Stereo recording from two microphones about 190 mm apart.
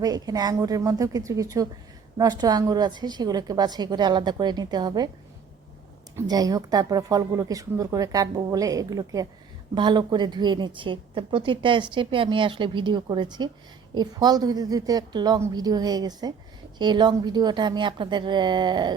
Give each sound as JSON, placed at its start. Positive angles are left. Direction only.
{"t": 0.0, "sound": "a woman's voice", "side_deg": -20}
{"t": 6.1, "sound": "speech", "side_deg": -20}